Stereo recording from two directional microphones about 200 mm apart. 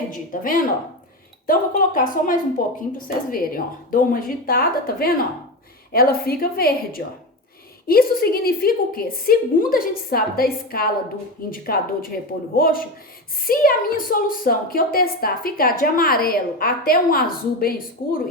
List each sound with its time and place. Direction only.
0.1 s a woman's voice: 45° left (ahead or behind)